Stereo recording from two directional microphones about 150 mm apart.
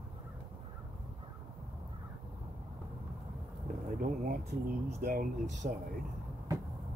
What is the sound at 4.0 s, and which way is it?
Speech, 70° right (ahead or behind).